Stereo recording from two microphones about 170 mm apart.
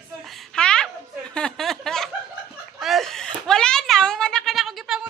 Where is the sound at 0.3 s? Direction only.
5° left (ahead or behind).